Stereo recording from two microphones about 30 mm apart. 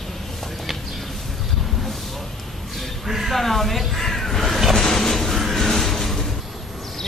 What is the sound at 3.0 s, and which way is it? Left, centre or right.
Speech, centre.